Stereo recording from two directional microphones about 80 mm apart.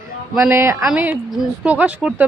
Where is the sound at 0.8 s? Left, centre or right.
Centre.